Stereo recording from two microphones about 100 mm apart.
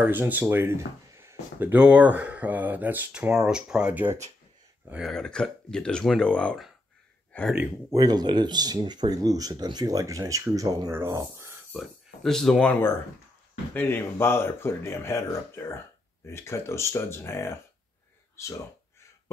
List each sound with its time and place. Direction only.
0.0 s speech: 20° right (ahead or behind)
1.7 s speech: 15° right (ahead or behind)
5.0 s speech: 5° left (ahead or behind)
7.9 s speech: 40° right (ahead or behind)
11.7 s speech: centre (ahead or behind)
13.7 s speech: 20° left (ahead or behind)